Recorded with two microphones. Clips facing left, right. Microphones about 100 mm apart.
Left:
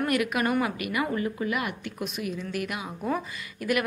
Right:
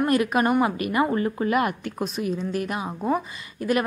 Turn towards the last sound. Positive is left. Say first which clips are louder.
# right 3 dB
turn(degrees=-30)  # may be behind; listen again after turning